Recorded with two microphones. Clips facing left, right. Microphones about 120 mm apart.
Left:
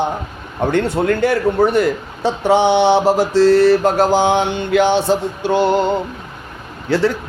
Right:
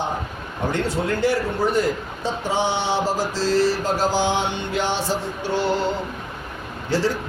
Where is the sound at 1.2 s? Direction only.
60° left (ahead or behind).